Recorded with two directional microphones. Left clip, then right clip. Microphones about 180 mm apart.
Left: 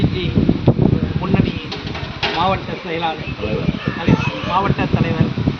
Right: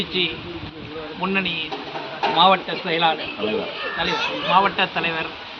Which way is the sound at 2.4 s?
15° left (ahead or behind).